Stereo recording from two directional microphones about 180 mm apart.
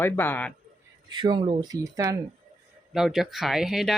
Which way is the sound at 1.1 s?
25° right (ahead or behind).